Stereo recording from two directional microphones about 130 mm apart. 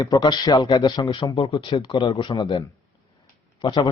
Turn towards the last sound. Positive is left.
turn(degrees=35)  # may be behind; listen again after turning